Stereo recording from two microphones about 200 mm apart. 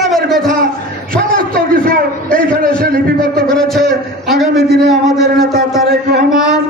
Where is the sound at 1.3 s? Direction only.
45° right (ahead or behind).